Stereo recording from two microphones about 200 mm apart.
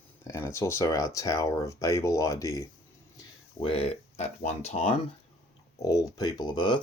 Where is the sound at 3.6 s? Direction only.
30° left (ahead or behind).